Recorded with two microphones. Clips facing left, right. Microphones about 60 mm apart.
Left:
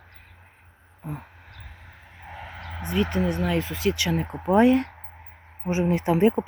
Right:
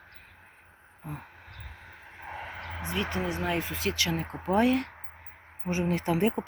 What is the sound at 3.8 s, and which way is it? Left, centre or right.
Speech, centre.